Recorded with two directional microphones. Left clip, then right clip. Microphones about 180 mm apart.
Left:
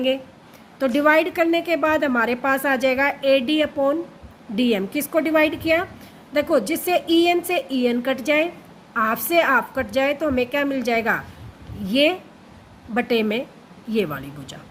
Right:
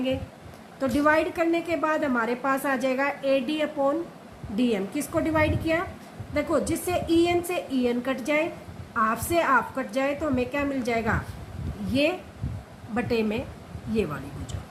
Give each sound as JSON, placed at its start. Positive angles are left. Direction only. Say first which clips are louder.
{"t": 0.8, "sound": "a woman's voice", "louder": "left 5 dB", "side_deg": 50}